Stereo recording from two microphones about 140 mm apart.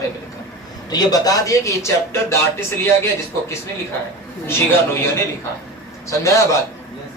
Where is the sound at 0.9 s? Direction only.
25° left (ahead or behind).